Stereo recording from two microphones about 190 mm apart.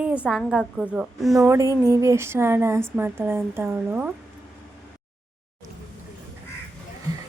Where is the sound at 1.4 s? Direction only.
15° right (ahead or behind).